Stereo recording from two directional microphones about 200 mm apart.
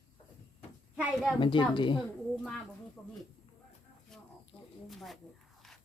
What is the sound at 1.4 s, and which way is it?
Speech, 25° left (ahead or behind).